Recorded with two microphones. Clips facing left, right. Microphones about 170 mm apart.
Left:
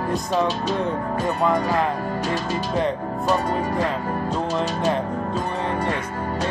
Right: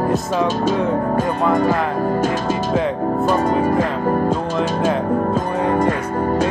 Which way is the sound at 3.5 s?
45° right (ahead or behind).